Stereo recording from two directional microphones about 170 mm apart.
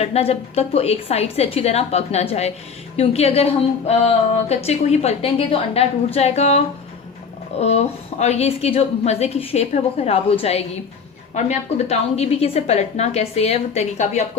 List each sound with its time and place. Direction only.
0.0 s a woman's voice: 35° left (ahead or behind)
7.6 s a woman's voice: 40° left (ahead or behind)